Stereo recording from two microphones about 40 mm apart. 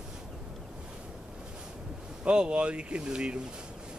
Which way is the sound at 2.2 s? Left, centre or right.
Right.